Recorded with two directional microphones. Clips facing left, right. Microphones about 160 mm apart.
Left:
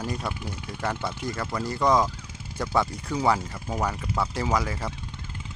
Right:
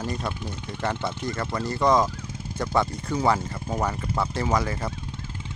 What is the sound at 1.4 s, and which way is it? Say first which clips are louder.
Speech: right 1 dB; 5° right (ahead or behind).